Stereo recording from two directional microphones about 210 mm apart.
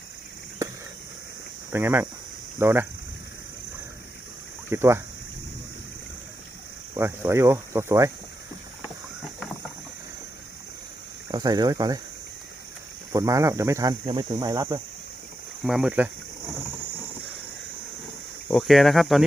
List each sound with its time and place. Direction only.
1.7 s speech: 10° right (ahead or behind)
4.7 s speech: 10° right (ahead or behind)
6.9 s speech: 10° right (ahead or behind)
11.3 s speech: 20° right (ahead or behind)
13.1 s speech: 15° right (ahead or behind)
15.6 s speech: 5° right (ahead or behind)
18.4 s speech: centre (ahead or behind)